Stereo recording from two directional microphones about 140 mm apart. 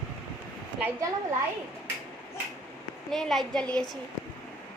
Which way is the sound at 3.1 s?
Centre (ahead or behind).